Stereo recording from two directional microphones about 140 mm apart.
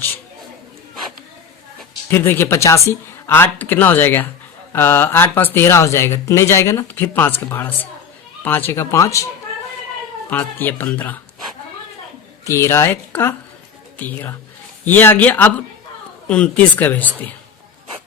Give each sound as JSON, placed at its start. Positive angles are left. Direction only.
{"t": 2.0, "sound": "a woman's voice", "side_deg": 15}
{"t": 12.5, "sound": "a woman's voice", "side_deg": 20}